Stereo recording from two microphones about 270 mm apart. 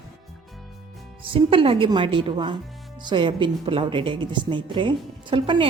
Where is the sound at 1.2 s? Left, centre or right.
Centre.